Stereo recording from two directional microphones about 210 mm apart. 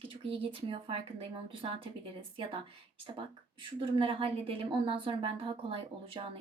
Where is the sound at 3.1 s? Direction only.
25° right (ahead or behind).